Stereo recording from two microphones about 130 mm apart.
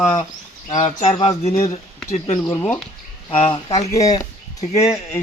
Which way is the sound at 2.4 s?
15° left (ahead or behind).